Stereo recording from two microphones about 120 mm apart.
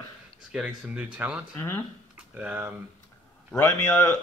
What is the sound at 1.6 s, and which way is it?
Speech, 20° left (ahead or behind).